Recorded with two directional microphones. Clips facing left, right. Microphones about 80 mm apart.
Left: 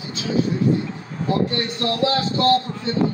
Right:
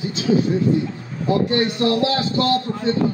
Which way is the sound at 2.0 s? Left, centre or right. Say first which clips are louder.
Even; left.